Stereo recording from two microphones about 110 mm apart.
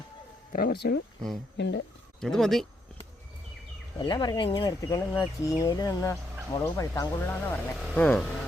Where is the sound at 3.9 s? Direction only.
45° left (ahead or behind).